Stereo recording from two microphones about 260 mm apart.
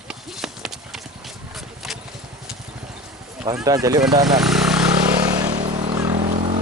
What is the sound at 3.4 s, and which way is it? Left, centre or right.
Speech, centre.